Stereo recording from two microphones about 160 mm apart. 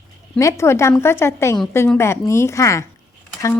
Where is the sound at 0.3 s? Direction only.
20° left (ahead or behind).